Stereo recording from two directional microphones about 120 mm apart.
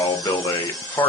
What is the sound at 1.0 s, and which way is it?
Speech, 15° left (ahead or behind).